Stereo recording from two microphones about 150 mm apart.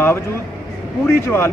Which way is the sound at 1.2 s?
15° left (ahead or behind).